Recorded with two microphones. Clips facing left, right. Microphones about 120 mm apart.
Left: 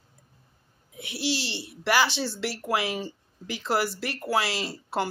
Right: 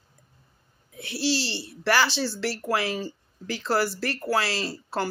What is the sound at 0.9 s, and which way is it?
Speech, 15° left (ahead or behind).